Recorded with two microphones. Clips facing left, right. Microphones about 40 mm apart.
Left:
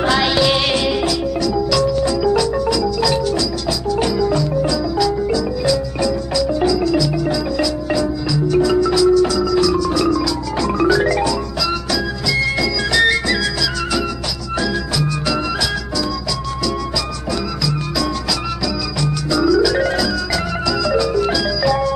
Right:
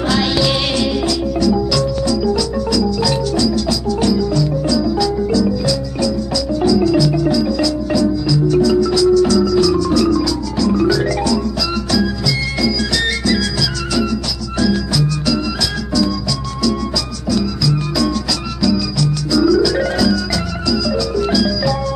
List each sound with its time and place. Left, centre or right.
0.0 s music: centre
2.0 s music: left
2.7 s marimba: centre
4.0 s music: centre
6.8 s music: centre
10.6 s music: left
12.6 s music: centre
14.6 s music: centre
19.4 s organ: centre
21.2 s music: centre